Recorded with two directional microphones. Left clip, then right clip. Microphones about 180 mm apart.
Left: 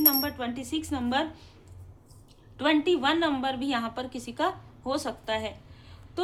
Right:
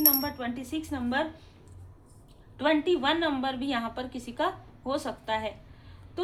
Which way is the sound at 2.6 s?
20° left (ahead or behind).